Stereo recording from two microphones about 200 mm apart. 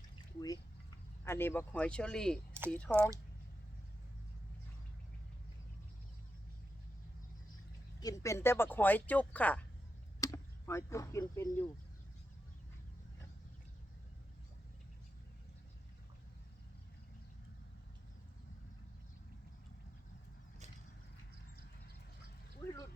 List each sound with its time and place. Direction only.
0.3 s speech: 20° left (ahead or behind)
8.0 s speech: 15° left (ahead or behind)